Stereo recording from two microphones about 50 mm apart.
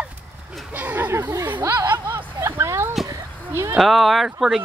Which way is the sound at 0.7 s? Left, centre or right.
Right.